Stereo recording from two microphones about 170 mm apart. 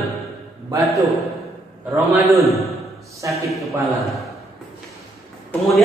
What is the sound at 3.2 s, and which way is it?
Speech, 20° right (ahead or behind).